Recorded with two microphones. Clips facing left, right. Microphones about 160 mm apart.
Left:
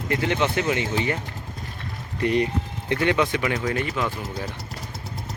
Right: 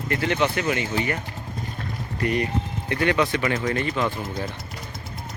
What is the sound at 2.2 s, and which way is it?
Speech, 25° left (ahead or behind).